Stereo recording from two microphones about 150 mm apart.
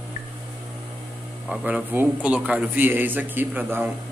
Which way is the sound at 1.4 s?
5° right (ahead or behind).